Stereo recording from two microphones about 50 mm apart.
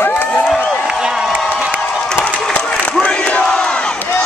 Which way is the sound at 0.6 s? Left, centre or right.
Centre.